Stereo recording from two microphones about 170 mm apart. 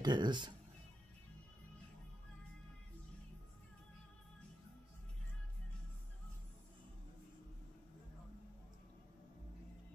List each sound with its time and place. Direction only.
0.0 s speech: 25° right (ahead or behind)